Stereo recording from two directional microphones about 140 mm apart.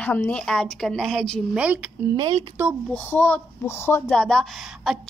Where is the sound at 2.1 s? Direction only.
30° right (ahead or behind).